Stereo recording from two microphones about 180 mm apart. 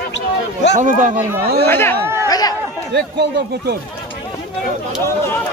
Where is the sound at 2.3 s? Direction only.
20° left (ahead or behind).